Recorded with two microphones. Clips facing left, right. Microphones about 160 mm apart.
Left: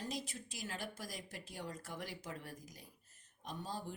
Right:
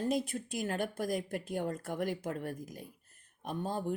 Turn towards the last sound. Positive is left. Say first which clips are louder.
# right 10 dB
turn(degrees=-55)  # may be behind; listen again after turning